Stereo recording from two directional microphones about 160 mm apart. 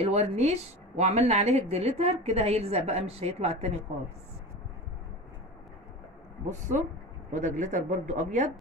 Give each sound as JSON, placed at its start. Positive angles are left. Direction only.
{"t": 0.0, "sound": "a woman's voice", "side_deg": -45}
{"t": 7.3, "sound": "speech", "side_deg": -50}